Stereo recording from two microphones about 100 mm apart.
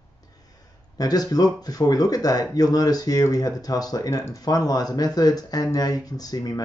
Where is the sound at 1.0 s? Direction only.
40° left (ahead or behind).